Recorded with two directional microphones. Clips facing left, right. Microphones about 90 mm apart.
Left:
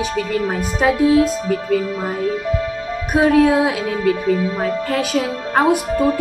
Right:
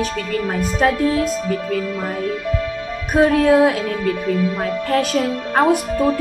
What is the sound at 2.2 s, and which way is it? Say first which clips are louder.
Music: left 4 dB; 35° left (ahead or behind).